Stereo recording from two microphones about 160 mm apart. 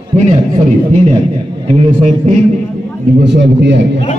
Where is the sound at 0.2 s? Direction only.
45° right (ahead or behind).